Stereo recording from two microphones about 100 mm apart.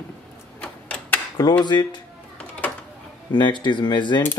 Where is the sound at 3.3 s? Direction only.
50° left (ahead or behind).